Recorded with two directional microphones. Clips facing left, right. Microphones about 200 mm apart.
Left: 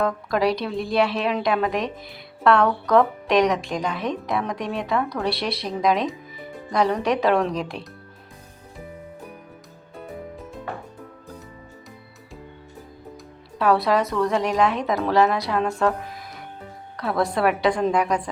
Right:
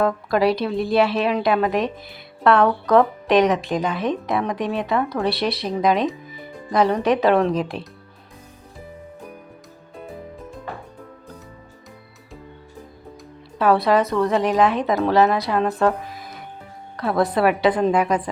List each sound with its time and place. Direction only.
0.0 s a woman's voice: centre (ahead or behind)
13.6 s a woman's voice: centre (ahead or behind)